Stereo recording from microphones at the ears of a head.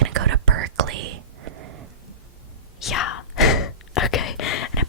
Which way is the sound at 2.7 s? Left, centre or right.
Left.